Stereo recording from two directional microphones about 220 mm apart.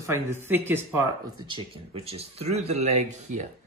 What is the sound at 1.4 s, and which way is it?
Speech, 25° right (ahead or behind).